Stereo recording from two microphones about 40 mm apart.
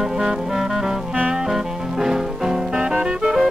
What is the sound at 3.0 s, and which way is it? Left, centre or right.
Music, right.